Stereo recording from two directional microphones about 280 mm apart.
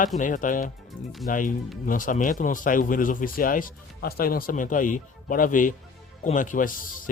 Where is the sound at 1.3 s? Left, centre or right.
Left.